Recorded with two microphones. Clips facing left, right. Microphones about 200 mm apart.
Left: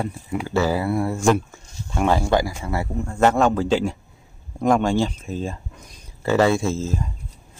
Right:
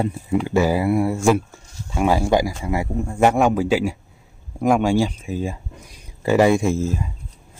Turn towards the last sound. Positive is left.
turn(degrees=-15)  # may be behind; listen again after turning